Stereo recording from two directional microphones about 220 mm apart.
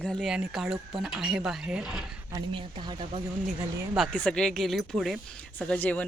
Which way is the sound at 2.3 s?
20° right (ahead or behind).